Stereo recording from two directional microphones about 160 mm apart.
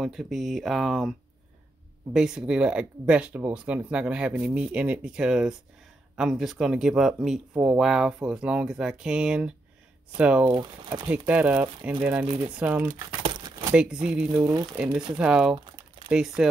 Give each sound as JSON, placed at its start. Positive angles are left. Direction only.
{"t": 0.0, "sound": "speech", "side_deg": 0}
{"t": 2.1, "sound": "speech", "side_deg": -5}
{"t": 10.5, "sound": "speech", "side_deg": -25}
{"t": 11.2, "sound": "speech", "side_deg": -10}
{"t": 13.2, "sound": "crumpling", "side_deg": -30}
{"t": 14.3, "sound": "speech", "side_deg": -20}
{"t": 15.1, "sound": "speech", "side_deg": -5}
{"t": 15.5, "sound": "crumpling", "side_deg": -25}
{"t": 16.1, "sound": "speech", "side_deg": -5}